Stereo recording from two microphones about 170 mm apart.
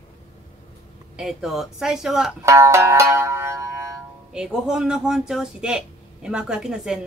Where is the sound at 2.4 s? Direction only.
15° right (ahead or behind).